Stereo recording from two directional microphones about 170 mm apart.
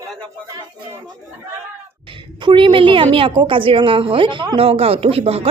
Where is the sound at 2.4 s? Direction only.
25° right (ahead or behind).